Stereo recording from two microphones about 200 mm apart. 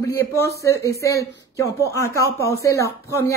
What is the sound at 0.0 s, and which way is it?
Speech, 15° left (ahead or behind).